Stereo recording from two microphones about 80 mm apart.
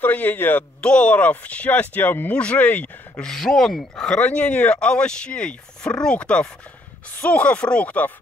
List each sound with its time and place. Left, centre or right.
0.0 s speech: left
3.3 s speech: centre